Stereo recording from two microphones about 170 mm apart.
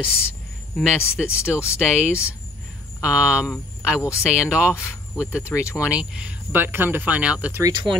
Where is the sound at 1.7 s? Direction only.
5° right (ahead or behind).